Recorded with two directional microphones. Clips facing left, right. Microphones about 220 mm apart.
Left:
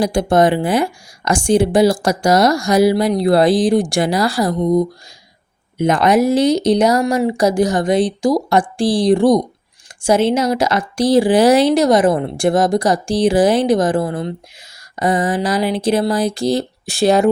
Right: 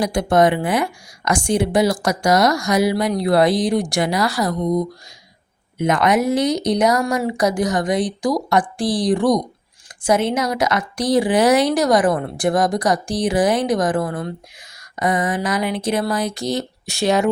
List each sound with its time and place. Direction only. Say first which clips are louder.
0.0 s a woman's voice: left 2 dB; 30° left (ahead or behind)